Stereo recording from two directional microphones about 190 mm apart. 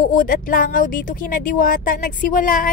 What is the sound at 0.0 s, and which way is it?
Speech, 45° left (ahead or behind).